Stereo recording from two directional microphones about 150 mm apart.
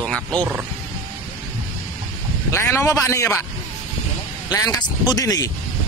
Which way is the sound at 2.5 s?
15° left (ahead or behind).